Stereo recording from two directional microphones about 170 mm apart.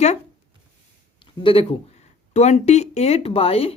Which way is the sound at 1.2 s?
30° left (ahead or behind).